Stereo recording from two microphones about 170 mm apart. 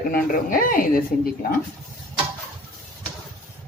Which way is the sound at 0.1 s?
55° left (ahead or behind).